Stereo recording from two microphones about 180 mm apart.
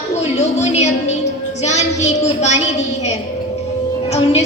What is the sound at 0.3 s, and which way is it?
A woman's voice, 35° left (ahead or behind).